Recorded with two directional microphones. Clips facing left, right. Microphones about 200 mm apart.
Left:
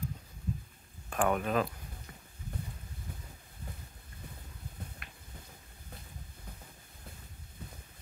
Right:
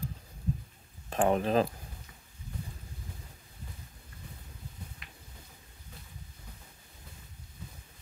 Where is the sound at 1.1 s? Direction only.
30° right (ahead or behind).